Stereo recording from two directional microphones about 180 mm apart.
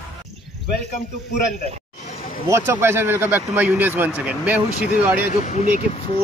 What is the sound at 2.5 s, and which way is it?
Speech, 15° right (ahead or behind).